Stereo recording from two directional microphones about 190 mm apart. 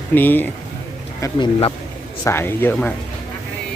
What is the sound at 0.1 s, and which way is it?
Speech, 10° left (ahead or behind).